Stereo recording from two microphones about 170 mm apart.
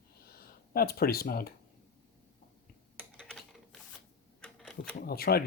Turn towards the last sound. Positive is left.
turn(degrees=65)  # may be behind; listen again after turning